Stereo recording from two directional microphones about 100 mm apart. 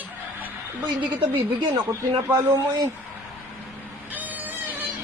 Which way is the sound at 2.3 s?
30° right (ahead or behind).